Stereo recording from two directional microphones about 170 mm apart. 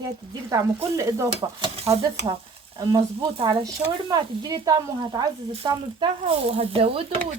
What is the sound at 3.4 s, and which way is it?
Stir, 30° right (ahead or behind).